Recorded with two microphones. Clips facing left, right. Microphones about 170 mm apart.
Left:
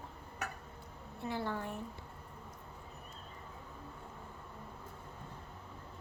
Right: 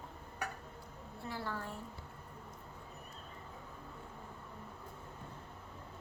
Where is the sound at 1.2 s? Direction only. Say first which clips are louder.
Left 4 dB; 20° left (ahead or behind).